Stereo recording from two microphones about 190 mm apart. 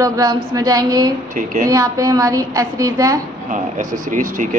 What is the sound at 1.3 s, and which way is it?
Speech, 45° right (ahead or behind).